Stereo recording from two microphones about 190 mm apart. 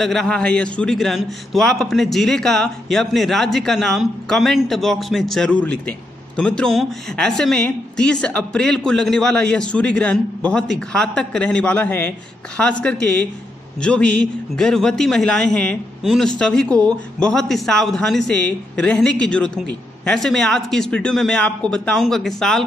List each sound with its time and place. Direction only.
0.0 s a man's voice: centre (ahead or behind)